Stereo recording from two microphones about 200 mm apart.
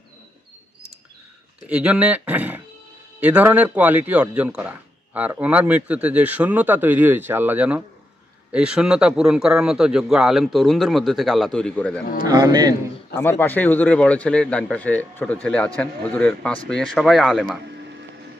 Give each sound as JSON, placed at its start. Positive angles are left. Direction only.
{"t": 1.7, "sound": "a man's voice", "side_deg": -5}
{"t": 12.3, "sound": "speech", "side_deg": -20}
{"t": 13.1, "sound": "a man's voice", "side_deg": 10}